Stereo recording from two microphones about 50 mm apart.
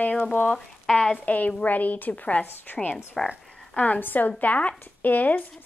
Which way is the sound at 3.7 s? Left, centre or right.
Left.